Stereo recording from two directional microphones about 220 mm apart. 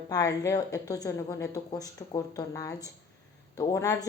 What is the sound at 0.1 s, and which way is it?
Speech, 15° left (ahead or behind).